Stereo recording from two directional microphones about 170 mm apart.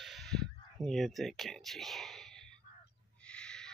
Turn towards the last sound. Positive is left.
turn(degrees=5)  # may be behind; listen again after turning